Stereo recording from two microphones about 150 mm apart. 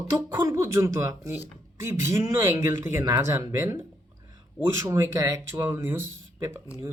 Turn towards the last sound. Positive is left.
turn(degrees=-20)  # may be behind; listen again after turning